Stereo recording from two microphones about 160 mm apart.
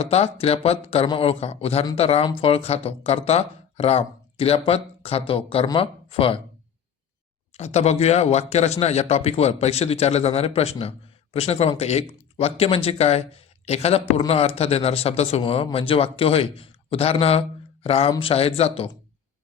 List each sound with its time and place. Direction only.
0.0 s speech: 40° left (ahead or behind)
7.5 s speech: 45° left (ahead or behind)